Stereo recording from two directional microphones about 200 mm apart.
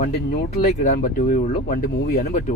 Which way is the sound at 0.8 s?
40° left (ahead or behind).